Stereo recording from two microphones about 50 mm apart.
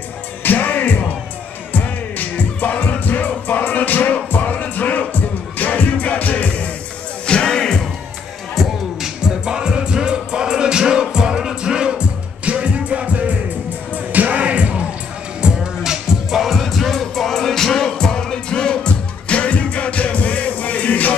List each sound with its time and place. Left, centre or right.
0.4 s music: left
7.2 s music: centre
9.0 s music: centre
15.4 s music: centre; by 21.1 s left